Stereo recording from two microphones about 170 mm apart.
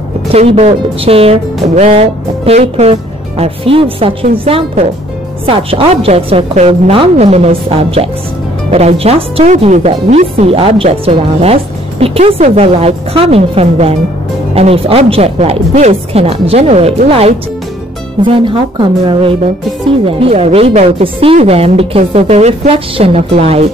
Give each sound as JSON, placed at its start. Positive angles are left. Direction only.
{"t": 0.3, "sound": "a woman's voice", "side_deg": -35}